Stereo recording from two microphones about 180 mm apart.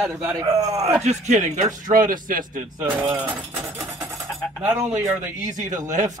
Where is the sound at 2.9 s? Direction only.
25° right (ahead or behind).